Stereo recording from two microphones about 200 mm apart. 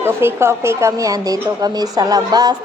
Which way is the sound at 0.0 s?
10° right (ahead or behind).